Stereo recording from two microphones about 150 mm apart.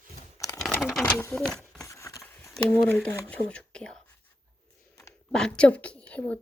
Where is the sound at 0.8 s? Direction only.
5° right (ahead or behind).